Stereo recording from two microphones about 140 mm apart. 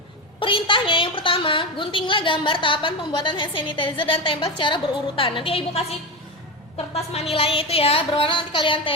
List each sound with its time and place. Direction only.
0.3 s a woman's voice: 40° left (ahead or behind)
6.9 s a woman's voice: 45° left (ahead or behind)